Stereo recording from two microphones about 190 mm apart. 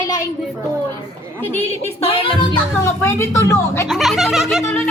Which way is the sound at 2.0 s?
30° left (ahead or behind).